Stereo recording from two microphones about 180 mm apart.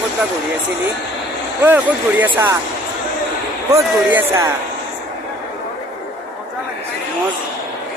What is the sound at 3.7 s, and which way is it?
Speech, 15° right (ahead or behind).